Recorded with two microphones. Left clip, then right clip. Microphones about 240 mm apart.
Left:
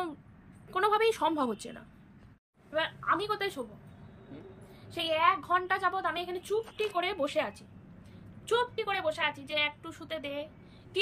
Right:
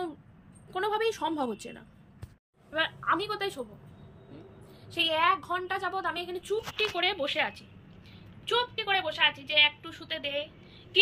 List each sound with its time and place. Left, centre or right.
0.7 s a woman's voice: centre
4.9 s a woman's voice: centre